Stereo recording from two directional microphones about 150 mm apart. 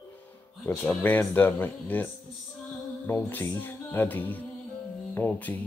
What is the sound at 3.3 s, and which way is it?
Speech, 15° left (ahead or behind).